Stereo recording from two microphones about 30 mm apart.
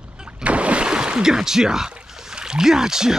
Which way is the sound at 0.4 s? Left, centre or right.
Right.